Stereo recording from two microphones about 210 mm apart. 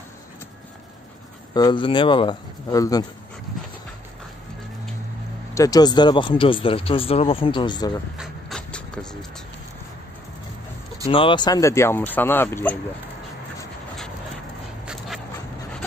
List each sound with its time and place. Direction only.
1.5 s speech: 20° left (ahead or behind)
5.5 s speech: 15° left (ahead or behind)
8.2 s vehicle: centre (ahead or behind)
11.1 s speech: 25° left (ahead or behind)